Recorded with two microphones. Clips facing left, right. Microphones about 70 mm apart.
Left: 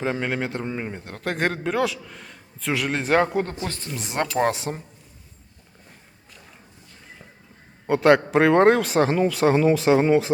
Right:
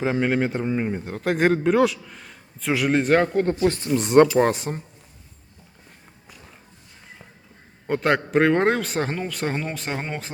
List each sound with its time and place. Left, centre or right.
0.0 s a man's voice: centre
3.6 s speech: right
3.9 s a man's voice: centre
7.9 s a man's voice: centre